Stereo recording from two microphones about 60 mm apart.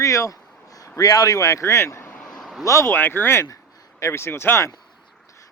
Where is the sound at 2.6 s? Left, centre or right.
Left.